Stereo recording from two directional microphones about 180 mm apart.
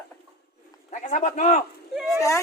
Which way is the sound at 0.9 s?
40° left (ahead or behind).